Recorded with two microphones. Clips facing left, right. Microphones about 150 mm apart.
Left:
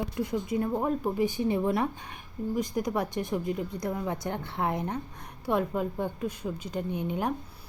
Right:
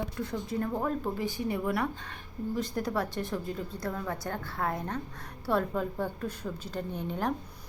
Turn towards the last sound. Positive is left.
turn(degrees=10)  # may be behind; listen again after turning